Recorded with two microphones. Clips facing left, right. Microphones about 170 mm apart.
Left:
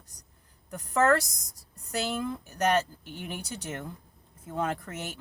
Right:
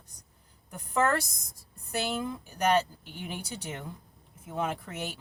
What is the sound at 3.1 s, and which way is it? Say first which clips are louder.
Speech: even; 15° right (ahead or behind).